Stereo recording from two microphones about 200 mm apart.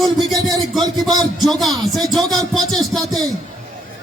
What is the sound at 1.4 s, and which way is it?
Speech, centre (ahead or behind).